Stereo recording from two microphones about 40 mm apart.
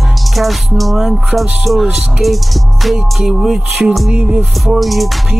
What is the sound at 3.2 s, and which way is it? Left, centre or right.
Speech, centre.